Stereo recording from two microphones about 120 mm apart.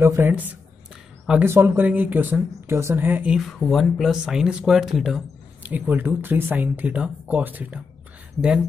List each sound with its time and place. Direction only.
0.0 s speech: 20° right (ahead or behind)
1.4 s speech: 20° right (ahead or behind)
3.3 s speech: centre (ahead or behind)
5.7 s speech: 15° right (ahead or behind)